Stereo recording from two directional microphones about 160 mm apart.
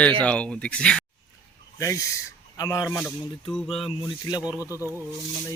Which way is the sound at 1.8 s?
20° left (ahead or behind).